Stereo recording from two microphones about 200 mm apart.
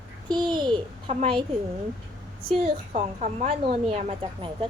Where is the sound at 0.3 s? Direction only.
20° right (ahead or behind).